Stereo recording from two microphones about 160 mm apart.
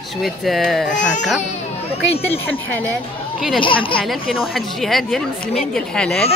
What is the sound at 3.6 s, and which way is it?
Speech, 30° left (ahead or behind).